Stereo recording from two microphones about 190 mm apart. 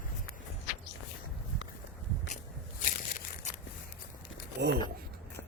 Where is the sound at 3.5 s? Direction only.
40° left (ahead or behind).